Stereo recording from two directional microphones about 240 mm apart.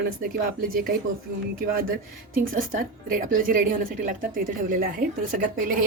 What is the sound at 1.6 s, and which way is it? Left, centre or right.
A woman's voice, right.